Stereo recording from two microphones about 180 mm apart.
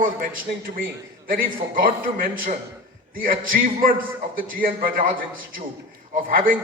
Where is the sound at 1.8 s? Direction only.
55° right (ahead or behind).